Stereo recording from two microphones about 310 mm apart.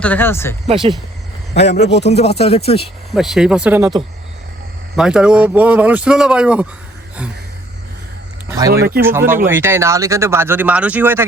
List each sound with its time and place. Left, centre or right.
0.0 s speech: centre
0.7 s speech: centre
1.5 s speech: left
3.2 s speech: centre
8.4 s speech: centre